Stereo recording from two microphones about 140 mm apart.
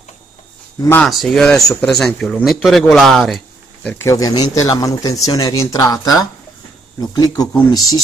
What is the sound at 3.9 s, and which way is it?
Speech, 20° left (ahead or behind).